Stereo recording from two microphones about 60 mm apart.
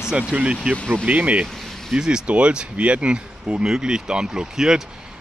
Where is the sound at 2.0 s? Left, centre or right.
Centre.